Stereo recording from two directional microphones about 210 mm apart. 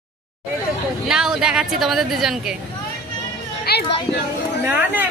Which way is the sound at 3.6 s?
50° left (ahead or behind).